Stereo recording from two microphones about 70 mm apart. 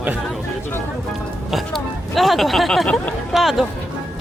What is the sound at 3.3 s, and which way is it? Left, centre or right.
Speech, centre.